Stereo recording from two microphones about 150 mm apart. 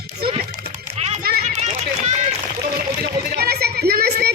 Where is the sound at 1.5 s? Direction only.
50° right (ahead or behind).